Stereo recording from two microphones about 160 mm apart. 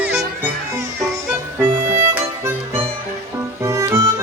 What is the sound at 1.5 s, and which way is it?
Music, 15° right (ahead or behind).